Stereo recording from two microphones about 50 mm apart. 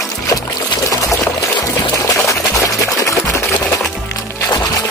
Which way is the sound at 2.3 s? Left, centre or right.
Left.